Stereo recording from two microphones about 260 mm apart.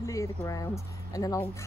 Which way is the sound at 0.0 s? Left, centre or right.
Centre.